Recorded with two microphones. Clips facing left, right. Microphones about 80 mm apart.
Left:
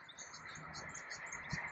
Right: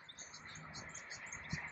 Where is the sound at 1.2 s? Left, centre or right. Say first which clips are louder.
Left 2 dB; left.